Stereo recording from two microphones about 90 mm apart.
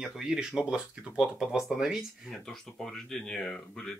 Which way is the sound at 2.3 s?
5° left (ahead or behind).